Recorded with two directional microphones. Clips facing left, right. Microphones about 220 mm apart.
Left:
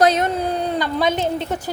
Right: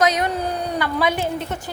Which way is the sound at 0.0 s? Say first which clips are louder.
Left 3 dB; 30° left (ahead or behind).